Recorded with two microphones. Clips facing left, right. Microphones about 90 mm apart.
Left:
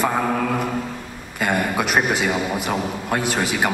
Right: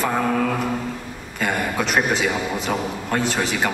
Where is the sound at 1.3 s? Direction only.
10° left (ahead or behind).